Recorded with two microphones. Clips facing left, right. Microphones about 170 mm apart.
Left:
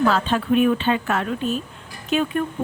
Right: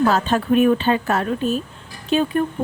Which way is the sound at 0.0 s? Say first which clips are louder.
Right 2 dB; 40° right (ahead or behind).